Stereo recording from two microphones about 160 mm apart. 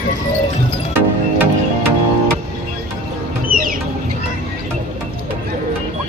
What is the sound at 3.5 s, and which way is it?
Chicken, 60° right (ahead or behind).